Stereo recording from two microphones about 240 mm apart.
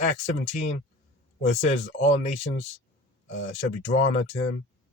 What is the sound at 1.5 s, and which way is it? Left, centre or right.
Speech, left.